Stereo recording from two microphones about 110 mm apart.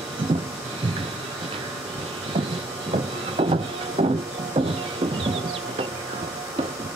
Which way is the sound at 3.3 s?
70° right (ahead or behind).